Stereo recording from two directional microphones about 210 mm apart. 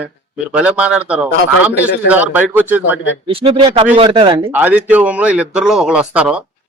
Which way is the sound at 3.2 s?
25° right (ahead or behind).